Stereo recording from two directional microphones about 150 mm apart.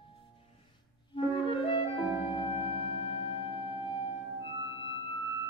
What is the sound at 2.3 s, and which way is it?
Music, 35° left (ahead or behind).